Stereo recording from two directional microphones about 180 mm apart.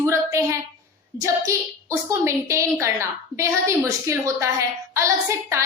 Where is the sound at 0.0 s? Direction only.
15° right (ahead or behind).